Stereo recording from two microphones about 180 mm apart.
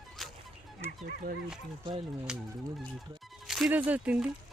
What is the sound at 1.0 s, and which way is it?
Speech, 50° right (ahead or behind).